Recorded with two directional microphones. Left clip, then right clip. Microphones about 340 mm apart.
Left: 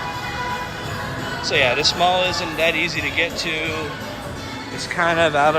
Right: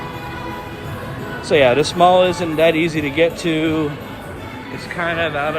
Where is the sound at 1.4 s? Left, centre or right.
Centre.